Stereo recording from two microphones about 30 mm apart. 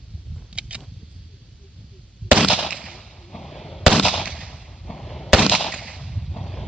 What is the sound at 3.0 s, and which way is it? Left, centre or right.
Firecracker, centre.